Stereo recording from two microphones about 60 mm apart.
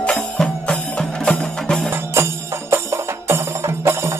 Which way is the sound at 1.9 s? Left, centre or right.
Right.